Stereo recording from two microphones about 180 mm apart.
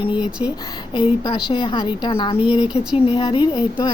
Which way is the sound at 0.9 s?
25° left (ahead or behind).